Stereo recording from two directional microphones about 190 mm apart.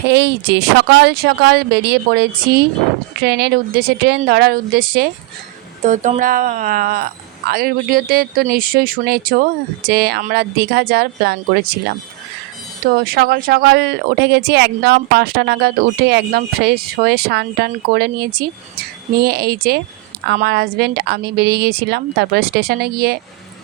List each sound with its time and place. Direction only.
0.1 s a woman's voice: 65° right (ahead or behind)
5.8 s a woman's voice: 40° right (ahead or behind); by 11.8 s 55° right (ahead or behind)
12.8 s a woman's voice: 55° right (ahead or behind)